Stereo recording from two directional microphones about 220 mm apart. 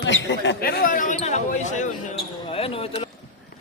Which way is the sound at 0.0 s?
55° left (ahead or behind).